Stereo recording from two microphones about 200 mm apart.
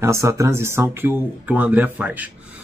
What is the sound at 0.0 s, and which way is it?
Speech, 15° right (ahead or behind).